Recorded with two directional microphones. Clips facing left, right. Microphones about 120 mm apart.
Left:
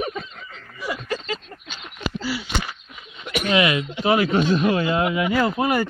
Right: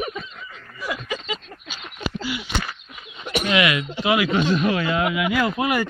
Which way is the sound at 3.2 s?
35° right (ahead or behind).